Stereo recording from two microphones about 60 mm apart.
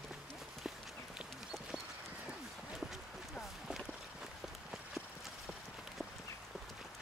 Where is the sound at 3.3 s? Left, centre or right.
Centre.